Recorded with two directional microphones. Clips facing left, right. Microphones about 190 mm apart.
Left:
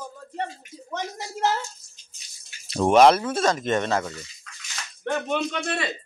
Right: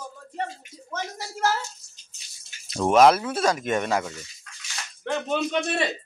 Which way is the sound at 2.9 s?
Centre (ahead or behind).